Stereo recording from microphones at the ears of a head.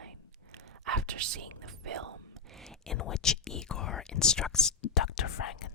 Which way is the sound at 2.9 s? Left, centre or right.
Left.